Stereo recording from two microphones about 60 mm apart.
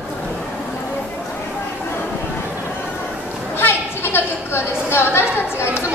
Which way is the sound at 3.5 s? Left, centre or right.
Left.